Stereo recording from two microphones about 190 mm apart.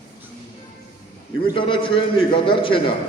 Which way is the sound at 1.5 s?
25° left (ahead or behind).